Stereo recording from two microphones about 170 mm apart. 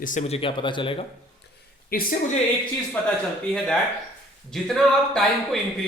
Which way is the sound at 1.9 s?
55° left (ahead or behind).